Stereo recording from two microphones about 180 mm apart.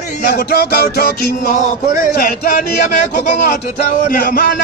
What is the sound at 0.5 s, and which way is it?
Speech, 60° left (ahead or behind).